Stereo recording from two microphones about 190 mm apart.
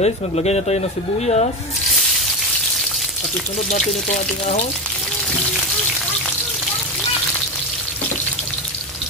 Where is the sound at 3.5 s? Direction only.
40° left (ahead or behind).